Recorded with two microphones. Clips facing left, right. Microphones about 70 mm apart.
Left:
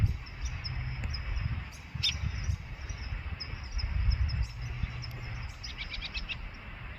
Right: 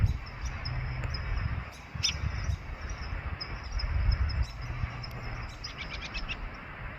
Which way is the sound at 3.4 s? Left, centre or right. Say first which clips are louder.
Right 4 dB; right.